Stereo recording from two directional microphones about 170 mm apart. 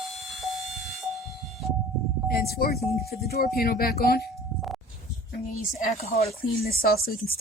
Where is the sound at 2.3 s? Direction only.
65° left (ahead or behind).